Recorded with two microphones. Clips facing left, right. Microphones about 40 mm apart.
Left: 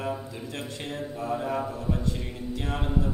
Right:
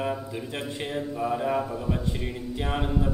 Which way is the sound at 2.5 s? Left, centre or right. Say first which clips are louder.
Right 2 dB; right.